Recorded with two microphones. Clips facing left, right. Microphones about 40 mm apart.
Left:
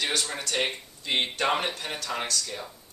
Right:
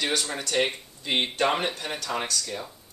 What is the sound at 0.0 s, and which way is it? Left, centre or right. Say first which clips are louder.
Speech: right 1 dB; centre.